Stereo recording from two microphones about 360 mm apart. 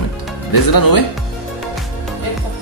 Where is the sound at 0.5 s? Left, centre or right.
Left.